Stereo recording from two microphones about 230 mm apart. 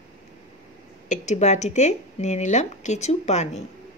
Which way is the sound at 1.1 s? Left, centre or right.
Left.